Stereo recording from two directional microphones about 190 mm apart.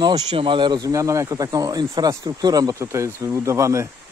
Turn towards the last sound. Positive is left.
turn(degrees=-15)  # may be behind; listen again after turning